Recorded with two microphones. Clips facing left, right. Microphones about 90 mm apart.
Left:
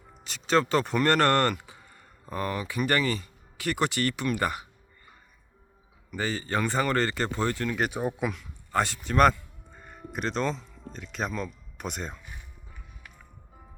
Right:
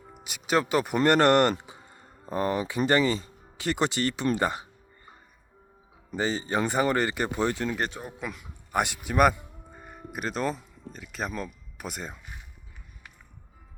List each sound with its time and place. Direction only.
0.1 s speech: 10° right (ahead or behind)
6.1 s speech: 20° right (ahead or behind)
7.8 s speech: 15° left (ahead or behind)
8.2 s a man's voice: centre (ahead or behind)
8.7 s speech: 15° right (ahead or behind)